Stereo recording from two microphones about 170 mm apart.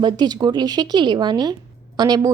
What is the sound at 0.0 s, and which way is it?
Speech, 25° right (ahead or behind).